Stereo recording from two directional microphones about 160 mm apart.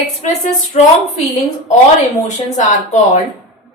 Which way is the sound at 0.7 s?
40° left (ahead or behind).